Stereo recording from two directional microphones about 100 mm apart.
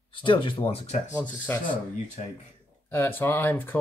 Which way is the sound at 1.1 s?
20° left (ahead or behind).